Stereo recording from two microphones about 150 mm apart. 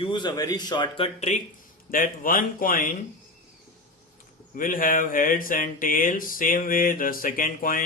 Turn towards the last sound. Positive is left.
turn(degrees=65)  # may be behind; listen again after turning